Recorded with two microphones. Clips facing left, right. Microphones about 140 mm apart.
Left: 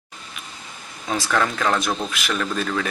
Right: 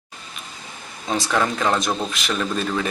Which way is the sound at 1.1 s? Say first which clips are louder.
Right 1 dB; 15° right (ahead or behind).